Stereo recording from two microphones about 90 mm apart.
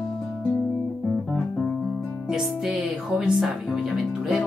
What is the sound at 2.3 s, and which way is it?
Music, 10° right (ahead or behind).